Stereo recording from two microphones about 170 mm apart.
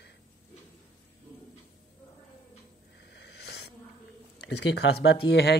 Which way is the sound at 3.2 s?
75° left (ahead or behind).